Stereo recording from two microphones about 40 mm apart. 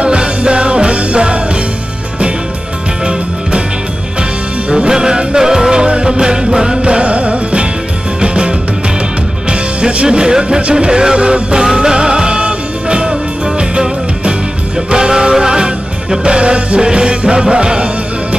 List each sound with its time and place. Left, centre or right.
0.0 s music: right
4.6 s music: centre